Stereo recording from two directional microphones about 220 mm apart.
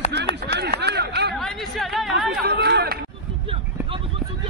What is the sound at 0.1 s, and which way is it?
Run, 50° right (ahead or behind).